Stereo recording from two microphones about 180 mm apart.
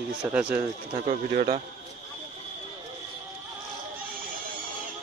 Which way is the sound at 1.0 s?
40° right (ahead or behind).